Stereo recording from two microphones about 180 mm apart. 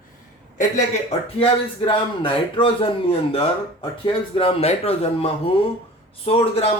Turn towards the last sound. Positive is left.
turn(degrees=35)  # may be behind; listen again after turning